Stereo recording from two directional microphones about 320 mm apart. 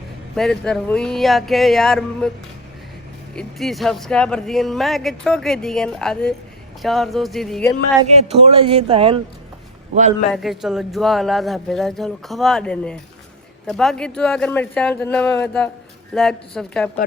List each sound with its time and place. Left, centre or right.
0.3 s speech: centre
3.3 s speech: centre
8.1 s speech: centre
10.3 s speech: centre